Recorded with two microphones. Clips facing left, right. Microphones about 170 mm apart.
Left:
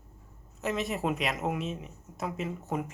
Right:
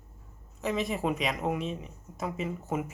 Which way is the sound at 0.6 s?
Centre (ahead or behind).